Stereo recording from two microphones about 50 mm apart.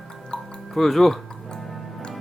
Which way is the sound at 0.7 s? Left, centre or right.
Centre.